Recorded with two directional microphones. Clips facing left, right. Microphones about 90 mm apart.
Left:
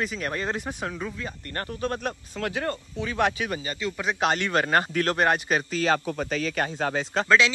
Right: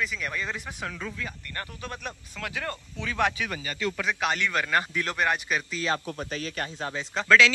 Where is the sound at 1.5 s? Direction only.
45° left (ahead or behind).